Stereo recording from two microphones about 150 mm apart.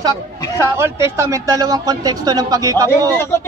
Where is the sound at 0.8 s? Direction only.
20° right (ahead or behind).